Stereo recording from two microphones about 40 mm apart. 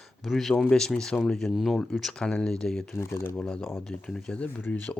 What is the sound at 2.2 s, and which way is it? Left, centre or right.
Speech, centre.